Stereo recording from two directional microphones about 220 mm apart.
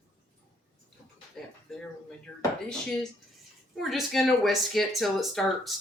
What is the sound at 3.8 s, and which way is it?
Speech, centre (ahead or behind).